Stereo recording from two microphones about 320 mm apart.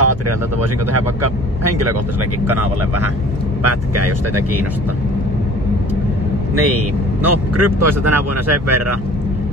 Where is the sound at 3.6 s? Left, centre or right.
Right.